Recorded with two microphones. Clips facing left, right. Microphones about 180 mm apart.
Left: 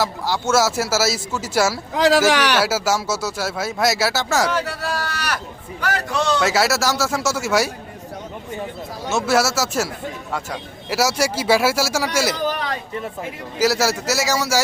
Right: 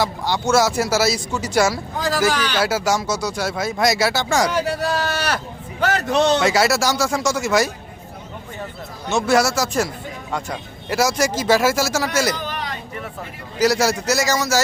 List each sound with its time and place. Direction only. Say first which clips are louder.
0.0 s speech: right 1 dB; 5° left (ahead or behind)
2.0 s speech: left 5 dB; 90° left
2.6 s speech: right 1 dB; 5° left (ahead or behind)
4.4 s speech: right 2 dB; 15° right (ahead or behind)
6.4 s speech: right 1 dB; centre (ahead or behind)
9.0 s speech: right 1 dB; 5° left (ahead or behind)
13.6 s speech: right 1 dB; 5° left (ahead or behind)